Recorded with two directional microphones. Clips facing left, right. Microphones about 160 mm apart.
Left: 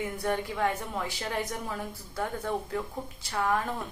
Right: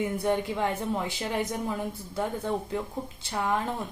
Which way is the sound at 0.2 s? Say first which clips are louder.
Left 1 dB; 20° right (ahead or behind).